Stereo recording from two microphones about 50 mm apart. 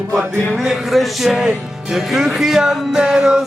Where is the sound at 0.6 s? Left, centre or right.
Centre.